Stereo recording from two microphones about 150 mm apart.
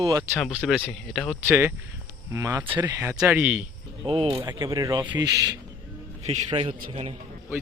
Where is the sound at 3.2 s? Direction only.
5° right (ahead or behind).